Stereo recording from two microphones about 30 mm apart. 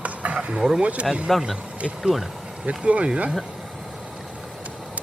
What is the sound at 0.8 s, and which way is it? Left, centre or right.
Speech, right.